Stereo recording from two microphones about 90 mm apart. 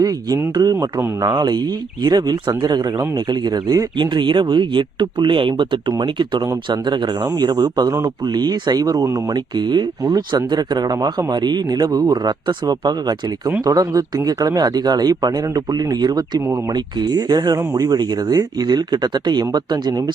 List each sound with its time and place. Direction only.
0.0 s speech: 40° right (ahead or behind)
9.3 s speech: 55° right (ahead or behind)